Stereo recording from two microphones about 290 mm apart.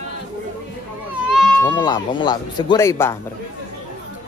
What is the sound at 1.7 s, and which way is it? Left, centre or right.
Speech, centre.